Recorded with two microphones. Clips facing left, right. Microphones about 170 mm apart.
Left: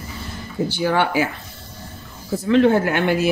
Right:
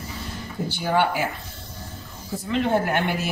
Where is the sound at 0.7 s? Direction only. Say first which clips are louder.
Left 2 dB; 85° left.